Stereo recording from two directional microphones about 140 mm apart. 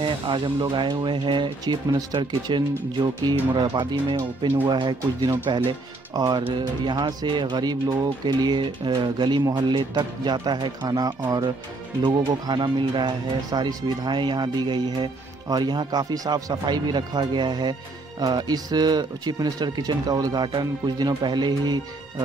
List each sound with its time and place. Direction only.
0.0 s speech: 35° right (ahead or behind)